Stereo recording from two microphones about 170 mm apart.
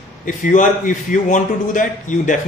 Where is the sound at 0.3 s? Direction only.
50° left (ahead or behind).